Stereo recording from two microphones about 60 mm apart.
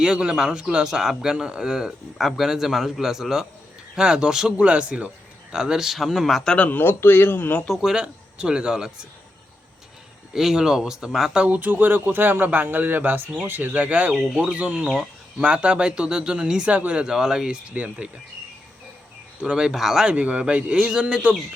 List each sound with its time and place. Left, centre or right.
0.0 s a man's voice: centre
6.6 s speech: left
7.7 s a man's voice: centre
10.3 s a man's voice: centre
11.3 s speech: right
14.1 s speech: centre
14.5 s a man's voice: right
19.4 s a man's voice: centre
20.1 s a man's voice: right